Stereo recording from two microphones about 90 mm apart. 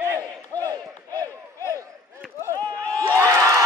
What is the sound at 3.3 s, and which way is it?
Crowd, 35° right (ahead or behind).